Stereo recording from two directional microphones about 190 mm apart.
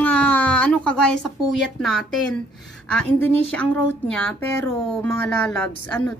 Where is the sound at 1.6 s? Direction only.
Centre (ahead or behind).